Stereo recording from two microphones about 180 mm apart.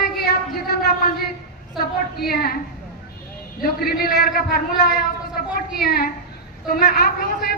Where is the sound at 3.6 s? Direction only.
55° left (ahead or behind).